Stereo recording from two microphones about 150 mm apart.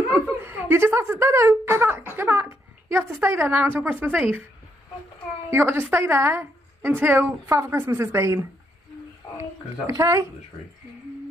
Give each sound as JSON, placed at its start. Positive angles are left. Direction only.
{"t": 0.4, "sound": "a woman's voice", "side_deg": -15}
{"t": 5.5, "sound": "a woman's voice", "side_deg": -15}